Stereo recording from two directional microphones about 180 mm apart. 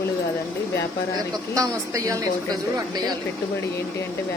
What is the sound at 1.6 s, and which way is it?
A woman's voice, 20° right (ahead or behind).